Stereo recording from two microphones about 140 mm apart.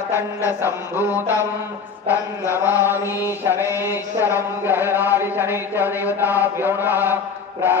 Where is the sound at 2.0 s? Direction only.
20° left (ahead or behind).